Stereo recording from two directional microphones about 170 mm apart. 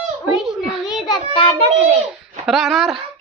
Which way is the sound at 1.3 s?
30° left (ahead or behind).